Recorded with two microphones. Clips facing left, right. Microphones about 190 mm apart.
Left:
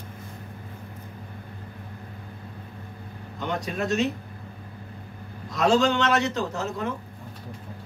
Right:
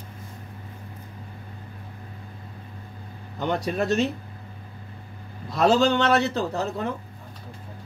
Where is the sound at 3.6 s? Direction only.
35° right (ahead or behind).